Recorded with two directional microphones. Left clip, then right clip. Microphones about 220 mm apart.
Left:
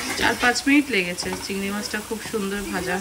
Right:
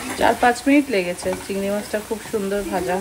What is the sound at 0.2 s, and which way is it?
Speech, centre (ahead or behind).